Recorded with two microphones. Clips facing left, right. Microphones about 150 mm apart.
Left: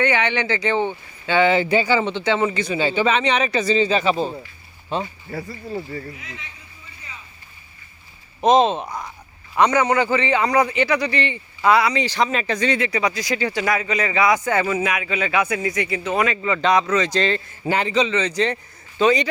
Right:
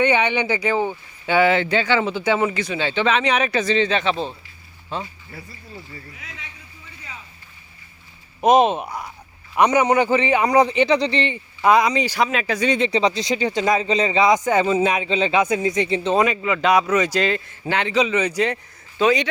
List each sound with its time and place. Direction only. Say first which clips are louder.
0.0 s a man's voice: right 2 dB; 15° right (ahead or behind)
1.7 s speech: left 1 dB; 5° left (ahead or behind)
4.9 s speech: left 4 dB; 20° left (ahead or behind)
5.3 s speech: left 10 dB; 80° left
8.4 s a man's voice: even; 10° right (ahead or behind)
12.6 s speech: right 4 dB; 20° right (ahead or behind)
16.4 s a man's voice: right 1 dB; 5° right (ahead or behind)
17.6 s speech: left 1 dB; 5° left (ahead or behind)
18.0 s a man's voice: right 1 dB; 10° right (ahead or behind)